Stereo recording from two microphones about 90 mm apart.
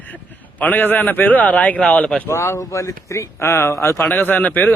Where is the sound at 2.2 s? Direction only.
30° left (ahead or behind).